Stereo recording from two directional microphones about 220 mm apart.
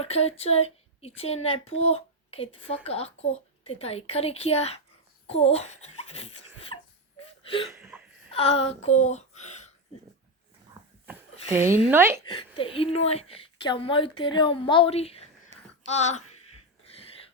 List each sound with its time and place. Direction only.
0.0 s a woman's voice: 30° left (ahead or behind)
7.2 s whimper: 25° left (ahead or behind)
7.7 s a sound: 5° right (ahead or behind)
8.3 s speech: 25° left (ahead or behind)
11.0 s a sound: 10° right (ahead or behind)
11.9 s a woman's voice: 10° right (ahead or behind)
12.2 s a woman's voice: 25° left (ahead or behind)